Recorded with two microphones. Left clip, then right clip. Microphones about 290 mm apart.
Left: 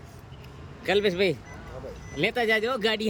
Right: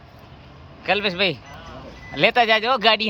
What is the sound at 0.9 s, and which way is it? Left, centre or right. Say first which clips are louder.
Speech: right 3 dB; centre.